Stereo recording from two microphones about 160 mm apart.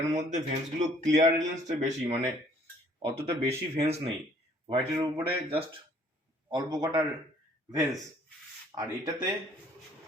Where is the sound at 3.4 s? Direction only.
40° right (ahead or behind).